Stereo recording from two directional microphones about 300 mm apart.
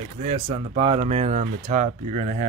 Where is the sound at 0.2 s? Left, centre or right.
Right.